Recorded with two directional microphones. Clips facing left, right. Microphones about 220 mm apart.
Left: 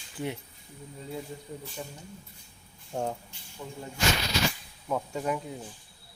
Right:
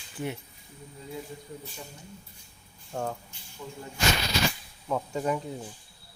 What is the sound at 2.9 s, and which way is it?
Speech, 20° left (ahead or behind).